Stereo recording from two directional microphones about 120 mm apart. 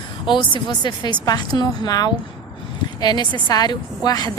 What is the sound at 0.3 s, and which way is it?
A woman's voice, 40° left (ahead or behind).